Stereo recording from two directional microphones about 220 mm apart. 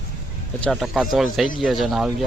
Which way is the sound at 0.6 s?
Centre (ahead or behind).